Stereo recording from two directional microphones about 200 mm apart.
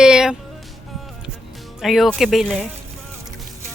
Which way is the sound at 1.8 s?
Centre (ahead or behind).